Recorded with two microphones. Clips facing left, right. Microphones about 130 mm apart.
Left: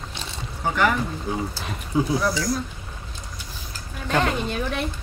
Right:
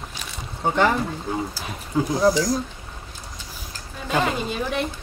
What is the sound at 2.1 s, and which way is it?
Speech, 40° right (ahead or behind).